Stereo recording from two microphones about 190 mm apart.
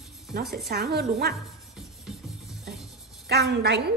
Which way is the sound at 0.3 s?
55° right (ahead or behind).